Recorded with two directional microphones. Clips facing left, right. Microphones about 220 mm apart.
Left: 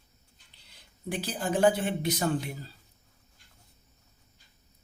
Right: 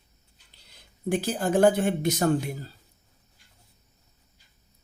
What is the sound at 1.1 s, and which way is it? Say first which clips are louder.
Speech: right 6 dB; 45° right (ahead or behind).